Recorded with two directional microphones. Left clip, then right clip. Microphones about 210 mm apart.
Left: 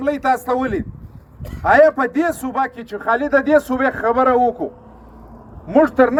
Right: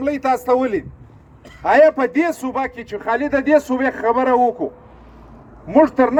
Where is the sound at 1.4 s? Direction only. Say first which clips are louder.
Left 5 dB; 55° left (ahead or behind).